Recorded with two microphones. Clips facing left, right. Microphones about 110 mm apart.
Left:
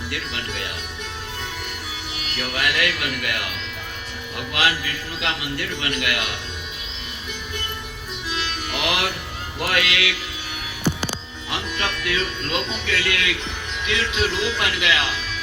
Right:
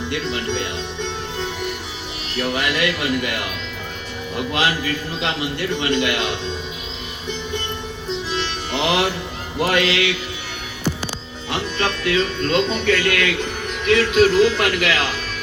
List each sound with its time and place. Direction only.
0.1 s speech: 30° right (ahead or behind)
2.2 s speech: 25° right (ahead or behind)
5.8 s speech: 25° right (ahead or behind)
8.7 s music: 30° right (ahead or behind)
9.6 s speech: 25° right (ahead or behind)
11.5 s speech: 30° right (ahead or behind)